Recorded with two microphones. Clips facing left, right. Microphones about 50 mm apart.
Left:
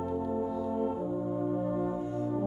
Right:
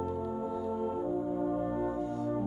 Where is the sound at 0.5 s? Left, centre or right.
Centre.